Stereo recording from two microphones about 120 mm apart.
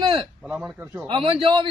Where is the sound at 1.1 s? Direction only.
45° right (ahead or behind).